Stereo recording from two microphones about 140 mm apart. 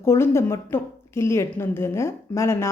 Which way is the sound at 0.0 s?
20° left (ahead or behind).